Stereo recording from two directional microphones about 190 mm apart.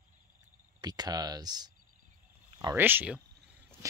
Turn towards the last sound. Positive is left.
turn(degrees=-10)  # may be behind; listen again after turning